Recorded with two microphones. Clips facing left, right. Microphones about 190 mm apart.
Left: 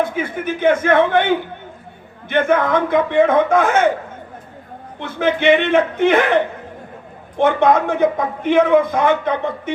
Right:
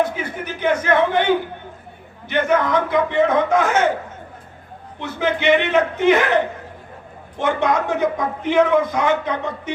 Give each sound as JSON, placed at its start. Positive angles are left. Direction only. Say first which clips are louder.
{"t": 0.0, "sound": "a man's voice", "louder": "left 2 dB", "side_deg": 50}
{"t": 2.3, "sound": "a man's voice", "louder": "left 2 dB", "side_deg": 55}
{"t": 4.9, "sound": "a man's voice", "louder": "left 3 dB", "side_deg": 55}